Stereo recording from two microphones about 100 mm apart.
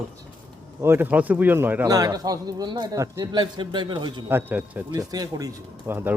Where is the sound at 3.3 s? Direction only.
50° right (ahead or behind).